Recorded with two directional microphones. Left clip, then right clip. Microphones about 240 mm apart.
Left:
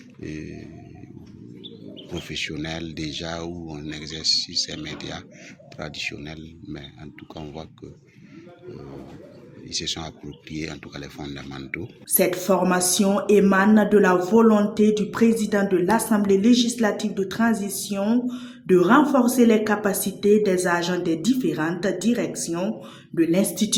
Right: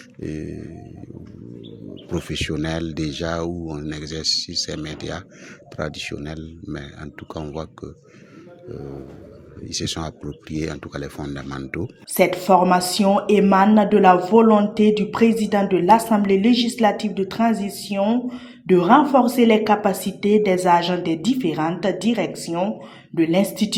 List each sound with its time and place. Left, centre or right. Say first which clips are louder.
0.2 s speech: right 5 dB; right
2.0 s speech: right 4 dB; right
9.6 s speech: right 2 dB; right
12.1 s a woman's voice: right 5 dB; centre